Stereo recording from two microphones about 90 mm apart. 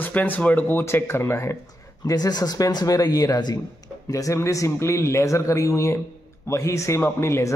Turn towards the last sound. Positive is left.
turn(degrees=30)  # may be behind; listen again after turning